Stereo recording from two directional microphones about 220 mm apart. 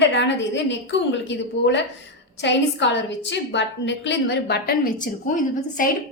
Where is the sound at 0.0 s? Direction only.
55° left (ahead or behind).